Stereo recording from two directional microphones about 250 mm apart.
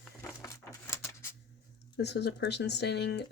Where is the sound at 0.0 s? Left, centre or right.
Centre.